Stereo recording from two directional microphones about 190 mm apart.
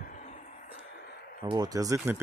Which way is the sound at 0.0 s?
40° left (ahead or behind).